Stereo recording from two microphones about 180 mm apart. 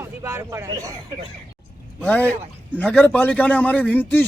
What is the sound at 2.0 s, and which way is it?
A man's voice, 10° left (ahead or behind).